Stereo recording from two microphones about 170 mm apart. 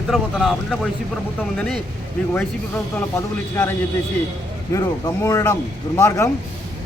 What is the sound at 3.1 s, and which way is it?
Speech, 15° left (ahead or behind).